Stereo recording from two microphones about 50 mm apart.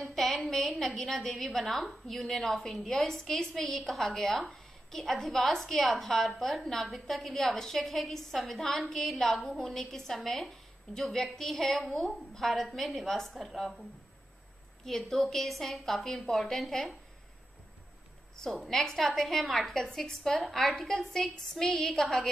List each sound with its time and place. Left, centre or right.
0.0 s a woman's voice: centre
14.9 s a woman's voice: centre
18.4 s a woman's voice: centre